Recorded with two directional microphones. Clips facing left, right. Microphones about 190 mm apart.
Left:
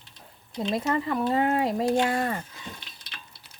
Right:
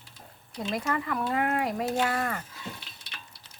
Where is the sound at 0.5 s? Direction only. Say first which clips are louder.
Left 4 dB; 25° left (ahead or behind).